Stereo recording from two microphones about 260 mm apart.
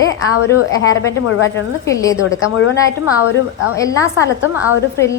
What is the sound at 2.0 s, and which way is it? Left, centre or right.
Speech, centre.